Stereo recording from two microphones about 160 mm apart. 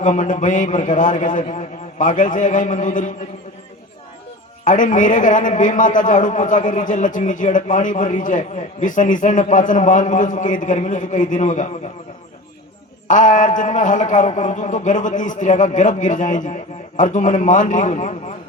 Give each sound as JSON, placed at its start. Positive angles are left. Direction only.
{"t": 0.0, "sound": "a man's voice", "side_deg": 50}
{"t": 4.6, "sound": "a man's voice", "side_deg": 55}
{"t": 13.1, "sound": "a man's voice", "side_deg": 50}